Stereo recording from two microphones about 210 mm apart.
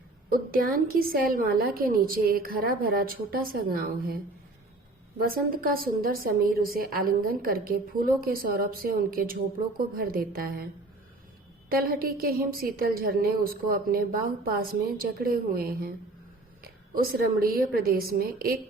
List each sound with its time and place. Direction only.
0.3 s a woman's voice: 40° right (ahead or behind)
5.3 s a woman's voice: 45° right (ahead or behind)
11.7 s a woman's voice: 45° right (ahead or behind)